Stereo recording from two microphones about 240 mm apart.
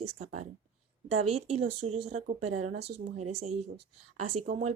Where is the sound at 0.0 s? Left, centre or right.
Right.